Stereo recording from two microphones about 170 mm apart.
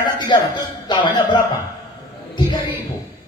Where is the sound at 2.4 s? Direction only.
25° left (ahead or behind).